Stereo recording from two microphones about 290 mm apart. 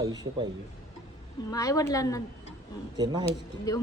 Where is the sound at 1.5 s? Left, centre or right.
Centre.